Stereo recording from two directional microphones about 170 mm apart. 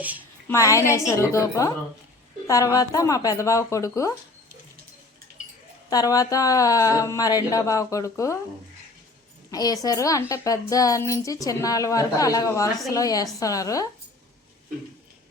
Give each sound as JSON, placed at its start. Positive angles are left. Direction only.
{"t": 0.0, "sound": "a woman's voice", "side_deg": -10}
{"t": 0.4, "sound": "a woman's voice", "side_deg": 20}
{"t": 5.9, "sound": "a woman's voice", "side_deg": 20}
{"t": 9.5, "sound": "a woman's voice", "side_deg": 20}